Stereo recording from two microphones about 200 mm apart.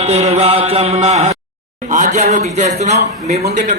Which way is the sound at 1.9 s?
35° right (ahead or behind).